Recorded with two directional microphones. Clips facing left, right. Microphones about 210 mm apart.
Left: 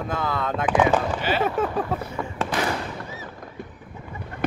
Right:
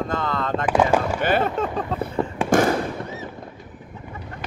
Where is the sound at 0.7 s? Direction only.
10° right (ahead or behind).